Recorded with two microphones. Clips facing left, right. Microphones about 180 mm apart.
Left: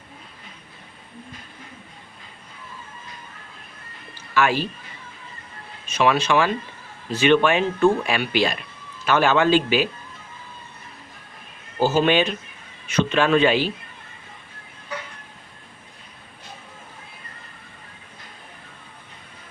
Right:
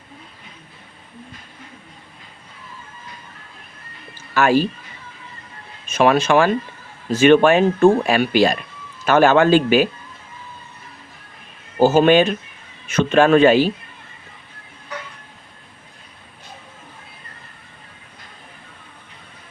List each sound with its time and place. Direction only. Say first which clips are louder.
4.4 s speech: right 5 dB; 45° right (ahead or behind)
5.9 s speech: right 4 dB; 50° right (ahead or behind)
11.8 s speech: right 6 dB; 50° right (ahead or behind)